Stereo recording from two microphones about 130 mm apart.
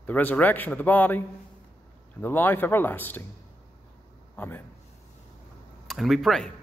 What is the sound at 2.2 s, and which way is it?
A man's voice, 15° left (ahead or behind).